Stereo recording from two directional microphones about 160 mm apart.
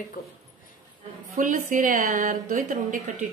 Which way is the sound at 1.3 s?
55° right (ahead or behind).